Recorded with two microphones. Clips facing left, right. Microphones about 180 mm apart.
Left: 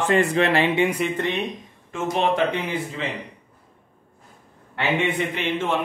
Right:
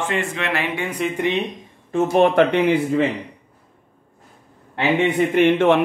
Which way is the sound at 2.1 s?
55° right (ahead or behind).